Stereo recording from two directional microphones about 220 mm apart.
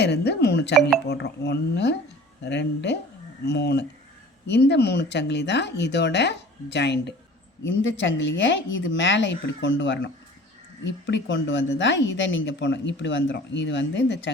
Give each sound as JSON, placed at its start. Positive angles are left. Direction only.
{"t": 0.0, "sound": "speech", "side_deg": 50}